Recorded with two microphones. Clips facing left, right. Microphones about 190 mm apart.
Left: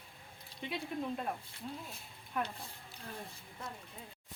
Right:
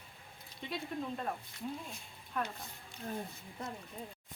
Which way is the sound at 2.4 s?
10° left (ahead or behind).